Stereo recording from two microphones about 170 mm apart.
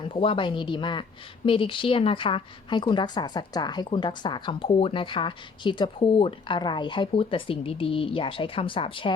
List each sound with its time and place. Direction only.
0.0 s a woman's voice: 30° left (ahead or behind)